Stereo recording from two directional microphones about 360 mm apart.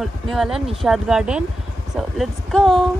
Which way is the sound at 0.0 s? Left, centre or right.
Centre.